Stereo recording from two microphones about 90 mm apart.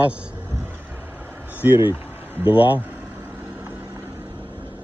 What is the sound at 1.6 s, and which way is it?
Speech, 20° right (ahead or behind).